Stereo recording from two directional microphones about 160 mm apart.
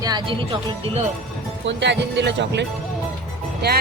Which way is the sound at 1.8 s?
90° right.